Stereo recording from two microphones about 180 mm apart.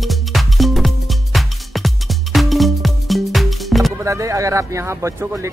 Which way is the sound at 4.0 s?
15° right (ahead or behind).